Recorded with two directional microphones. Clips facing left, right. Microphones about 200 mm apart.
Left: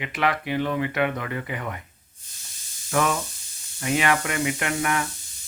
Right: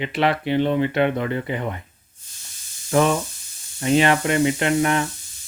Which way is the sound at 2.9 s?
30° right (ahead or behind).